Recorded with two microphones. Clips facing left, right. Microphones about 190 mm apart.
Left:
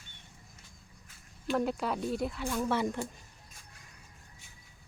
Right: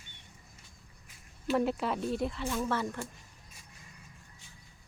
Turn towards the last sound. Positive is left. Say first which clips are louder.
# left 2 dB
turn(degrees=15)  # may be behind; listen again after turning